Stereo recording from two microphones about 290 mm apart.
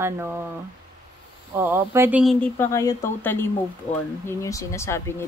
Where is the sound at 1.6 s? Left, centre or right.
Centre.